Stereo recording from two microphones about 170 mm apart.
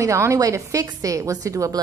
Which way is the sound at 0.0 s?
15° right (ahead or behind).